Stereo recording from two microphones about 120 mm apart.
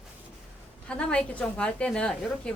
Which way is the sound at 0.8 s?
10° left (ahead or behind).